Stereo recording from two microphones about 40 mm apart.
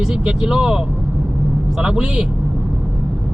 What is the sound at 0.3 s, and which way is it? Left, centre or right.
Speech, right.